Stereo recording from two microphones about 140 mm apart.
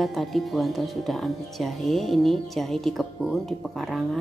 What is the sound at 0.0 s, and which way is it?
A woman's voice, centre (ahead or behind).